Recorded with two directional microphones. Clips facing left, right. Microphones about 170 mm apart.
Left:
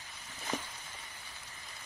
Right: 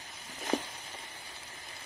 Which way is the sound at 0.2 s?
10° right (ahead or behind).